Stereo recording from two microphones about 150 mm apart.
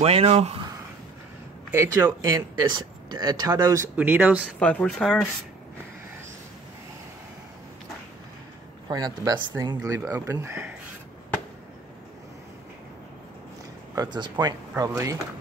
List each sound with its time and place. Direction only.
0.0 s speech: 45° right (ahead or behind)
1.7 s speech: 15° right (ahead or behind)
3.1 s speech: 30° right (ahead or behind)
3.9 s speech: 10° right (ahead or behind)
4.6 s speech: 5° left (ahead or behind)
8.8 s speech: 25° right (ahead or behind)
13.9 s speech: 30° right (ahead or behind)